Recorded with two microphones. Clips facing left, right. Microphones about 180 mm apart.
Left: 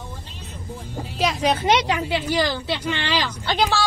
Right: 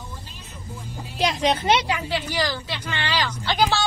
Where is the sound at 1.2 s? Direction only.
5° left (ahead or behind).